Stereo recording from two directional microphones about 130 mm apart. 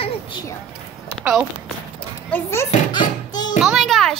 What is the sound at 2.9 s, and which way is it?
Music, 35° left (ahead or behind).